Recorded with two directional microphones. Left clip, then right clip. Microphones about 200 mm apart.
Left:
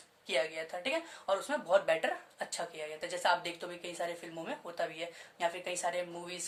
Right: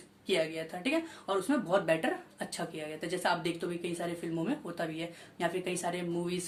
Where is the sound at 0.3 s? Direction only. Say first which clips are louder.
Right 2 dB; 15° left (ahead or behind).